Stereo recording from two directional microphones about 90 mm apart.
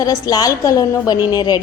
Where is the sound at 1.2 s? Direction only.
50° left (ahead or behind).